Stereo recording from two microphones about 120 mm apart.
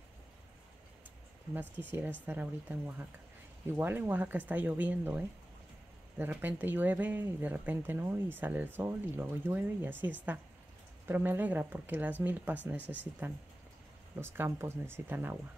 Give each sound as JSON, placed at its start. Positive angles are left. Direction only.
{"t": 1.5, "sound": "speech", "side_deg": -15}
{"t": 12.8, "sound": "speech", "side_deg": 15}
{"t": 14.1, "sound": "speech", "side_deg": -15}